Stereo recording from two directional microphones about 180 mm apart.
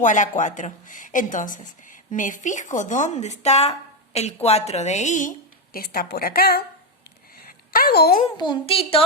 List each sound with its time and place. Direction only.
0.0 s a woman's voice: 45° left (ahead or behind)
5.7 s a woman's voice: 55° left (ahead or behind)
7.4 s a sound: 55° left (ahead or behind)
8.4 s a woman's voice: 30° left (ahead or behind)